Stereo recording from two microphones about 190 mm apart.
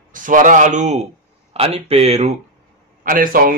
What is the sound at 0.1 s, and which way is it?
A man's voice, 45° right (ahead or behind).